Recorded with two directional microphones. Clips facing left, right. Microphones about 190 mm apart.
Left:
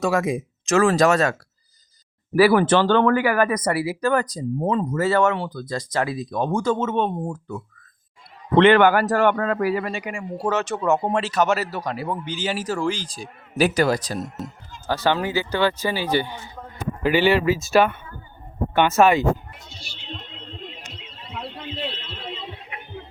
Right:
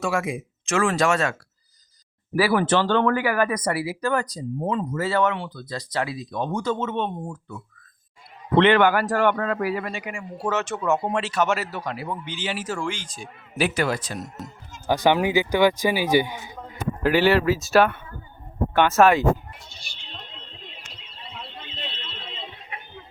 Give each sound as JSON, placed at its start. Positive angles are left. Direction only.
{"t": 0.0, "sound": "a man's voice", "side_deg": 40}
{"t": 2.3, "sound": "a man's voice", "side_deg": 50}
{"t": 14.8, "sound": "speech", "side_deg": -15}
{"t": 17.0, "sound": "speech", "side_deg": 0}
{"t": 21.2, "sound": "a sound", "side_deg": -30}